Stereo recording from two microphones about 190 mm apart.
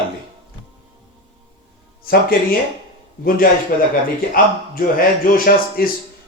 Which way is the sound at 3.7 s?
50° left (ahead or behind).